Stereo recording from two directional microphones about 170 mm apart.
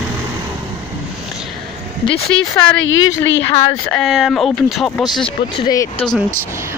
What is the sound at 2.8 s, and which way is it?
Speech, 90° left.